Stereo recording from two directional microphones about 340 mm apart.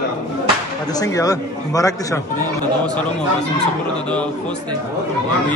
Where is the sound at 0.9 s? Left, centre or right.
Centre.